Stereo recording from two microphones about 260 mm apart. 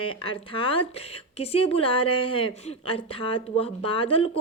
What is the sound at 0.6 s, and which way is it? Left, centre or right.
A woman's voice, left.